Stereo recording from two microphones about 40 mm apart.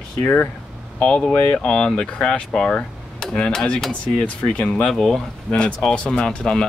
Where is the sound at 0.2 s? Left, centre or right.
Left.